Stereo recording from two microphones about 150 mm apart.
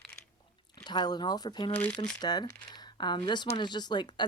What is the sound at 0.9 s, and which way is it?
Speech, 30° left (ahead or behind).